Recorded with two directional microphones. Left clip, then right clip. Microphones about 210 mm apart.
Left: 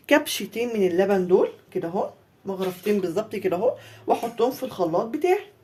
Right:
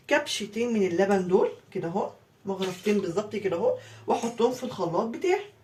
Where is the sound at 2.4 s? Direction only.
50° left (ahead or behind).